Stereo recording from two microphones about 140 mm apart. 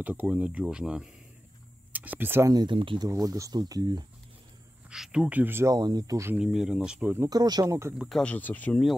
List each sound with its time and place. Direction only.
0.0 s speech: 10° right (ahead or behind)
2.5 s speech: 35° right (ahead or behind)
3.1 s speech: 25° right (ahead or behind)
4.8 s speech: 5° right (ahead or behind)
5.8 s speech: 30° right (ahead or behind)
6.3 s speech: 5° right (ahead or behind)
7.2 s speech: 30° right (ahead or behind)
8.2 s speech: 10° left (ahead or behind)